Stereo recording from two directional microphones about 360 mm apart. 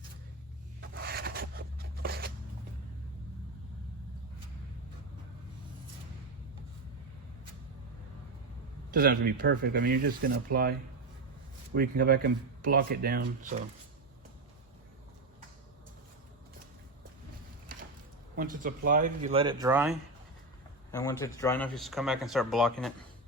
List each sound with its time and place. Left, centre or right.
0.8 s a sound: right
8.9 s speech: right
18.3 s speech: right; by 20.0 s centre
20.9 s speech: centre